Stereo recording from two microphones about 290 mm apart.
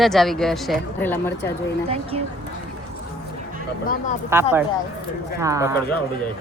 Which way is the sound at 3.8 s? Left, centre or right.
Left.